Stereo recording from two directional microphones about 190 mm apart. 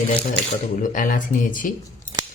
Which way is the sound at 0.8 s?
45° left (ahead or behind).